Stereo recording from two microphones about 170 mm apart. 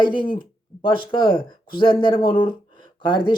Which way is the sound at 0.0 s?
30° left (ahead or behind).